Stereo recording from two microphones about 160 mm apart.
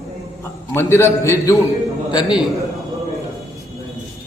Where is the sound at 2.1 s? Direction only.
25° left (ahead or behind).